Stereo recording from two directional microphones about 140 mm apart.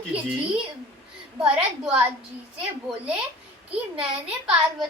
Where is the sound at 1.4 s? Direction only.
5° right (ahead or behind).